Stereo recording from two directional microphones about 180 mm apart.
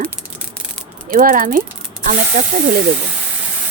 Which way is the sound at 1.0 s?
50° right (ahead or behind).